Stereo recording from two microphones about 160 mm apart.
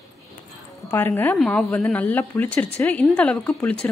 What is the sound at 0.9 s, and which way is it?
A woman's voice, 15° left (ahead or behind).